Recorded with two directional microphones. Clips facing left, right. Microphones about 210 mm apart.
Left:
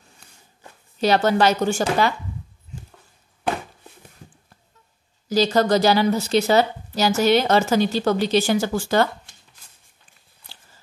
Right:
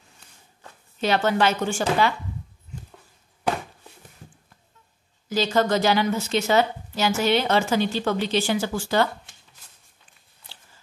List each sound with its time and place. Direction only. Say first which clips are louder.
0.9 s a woman's voice: left 4 dB; 40° left (ahead or behind)
5.3 s a woman's voice: left 4 dB; 35° left (ahead or behind)